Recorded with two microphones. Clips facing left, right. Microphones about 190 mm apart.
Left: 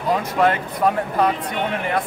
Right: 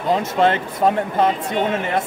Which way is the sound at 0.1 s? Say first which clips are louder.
Right 1 dB; 25° right (ahead or behind).